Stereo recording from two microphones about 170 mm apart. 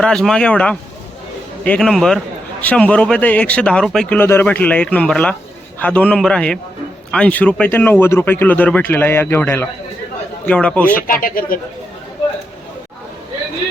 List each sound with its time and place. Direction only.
0.0 s a man's voice: 5° left (ahead or behind)
11.0 s speech: 55° left (ahead or behind)